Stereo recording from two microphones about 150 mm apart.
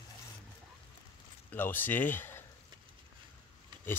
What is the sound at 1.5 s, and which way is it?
Speech, 15° left (ahead or behind).